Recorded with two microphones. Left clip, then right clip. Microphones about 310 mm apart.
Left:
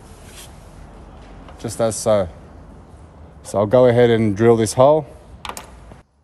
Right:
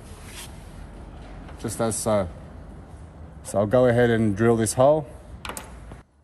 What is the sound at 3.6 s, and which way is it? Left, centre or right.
Speech, left.